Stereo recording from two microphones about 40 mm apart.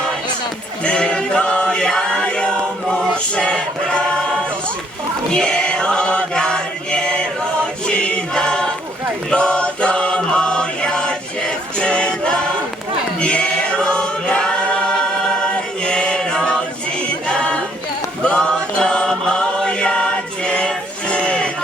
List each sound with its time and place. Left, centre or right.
0.9 s chant: left
3.3 s choir: left
5.3 s chant: left
7.9 s choir: left
9.3 s chant: left
13.1 s choir: left
15.8 s chant: left
17.2 s a sound: left
18.2 s choir: left